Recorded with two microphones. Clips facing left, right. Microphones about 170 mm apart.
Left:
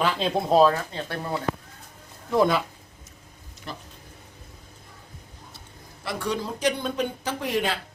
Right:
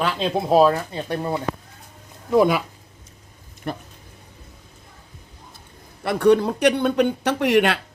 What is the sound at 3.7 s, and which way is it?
Speech, 55° right (ahead or behind).